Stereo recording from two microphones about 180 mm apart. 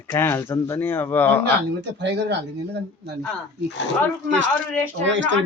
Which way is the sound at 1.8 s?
70° right (ahead or behind).